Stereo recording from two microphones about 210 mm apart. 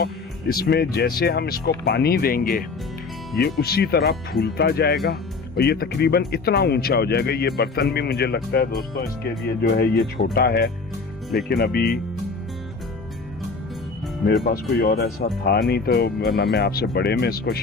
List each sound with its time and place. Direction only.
0.0 s speech: 45° left (ahead or behind)
14.5 s speech: 45° left (ahead or behind)